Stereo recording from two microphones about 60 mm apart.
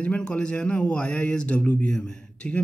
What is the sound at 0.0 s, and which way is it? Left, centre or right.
A man's voice, centre.